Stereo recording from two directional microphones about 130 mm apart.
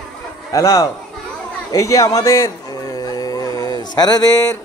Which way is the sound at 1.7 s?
25° left (ahead or behind).